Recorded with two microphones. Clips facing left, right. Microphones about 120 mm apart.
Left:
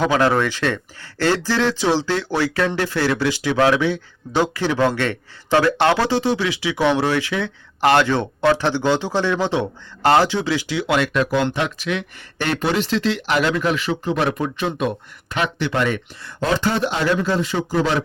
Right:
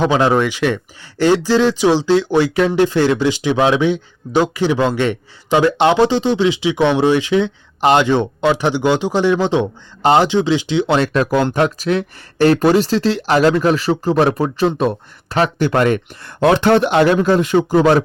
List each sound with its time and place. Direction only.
0.0 s speech: 20° right (ahead or behind); by 18.0 s 55° right (ahead or behind)